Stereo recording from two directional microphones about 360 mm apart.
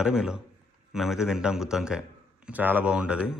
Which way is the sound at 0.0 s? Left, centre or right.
Centre.